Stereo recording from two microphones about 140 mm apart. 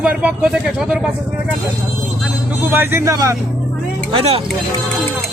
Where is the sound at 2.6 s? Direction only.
15° right (ahead or behind).